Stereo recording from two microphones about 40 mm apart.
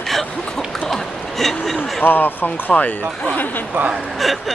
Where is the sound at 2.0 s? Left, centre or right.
Left.